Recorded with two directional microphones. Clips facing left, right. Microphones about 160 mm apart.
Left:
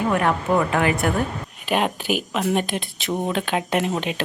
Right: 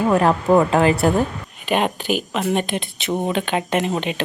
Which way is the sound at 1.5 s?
Centre (ahead or behind).